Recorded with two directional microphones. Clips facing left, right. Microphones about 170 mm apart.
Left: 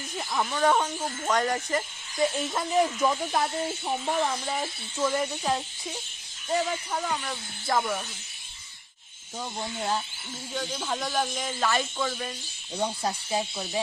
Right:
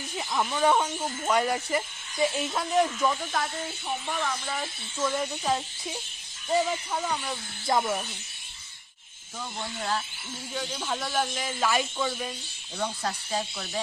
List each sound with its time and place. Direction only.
0.2 s speech: 5° right (ahead or behind)
0.9 s speech: 5° left (ahead or behind)
1.2 s speech: 10° right (ahead or behind); by 3.2 s 10° left (ahead or behind)
4.2 s speech: 20° left (ahead or behind)
4.9 s speech: 5° left (ahead or behind)
7.7 s speech: 15° right (ahead or behind)
9.6 s speech: 25° left (ahead or behind)
10.5 s speech: centre (ahead or behind)
12.8 s speech: 15° left (ahead or behind)